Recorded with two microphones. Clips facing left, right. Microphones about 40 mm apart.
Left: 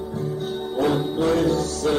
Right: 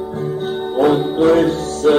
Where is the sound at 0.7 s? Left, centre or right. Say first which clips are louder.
Right 7 dB; right.